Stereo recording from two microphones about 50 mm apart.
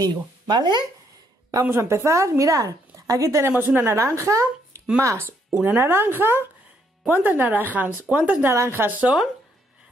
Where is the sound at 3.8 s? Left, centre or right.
Right.